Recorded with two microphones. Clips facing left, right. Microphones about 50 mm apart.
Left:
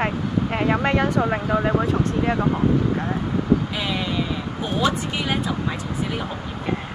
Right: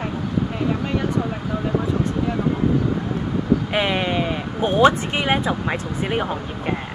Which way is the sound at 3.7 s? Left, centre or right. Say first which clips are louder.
Right 4 dB; right.